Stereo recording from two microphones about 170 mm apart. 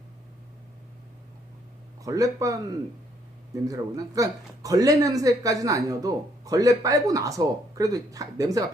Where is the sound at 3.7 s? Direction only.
20° right (ahead or behind).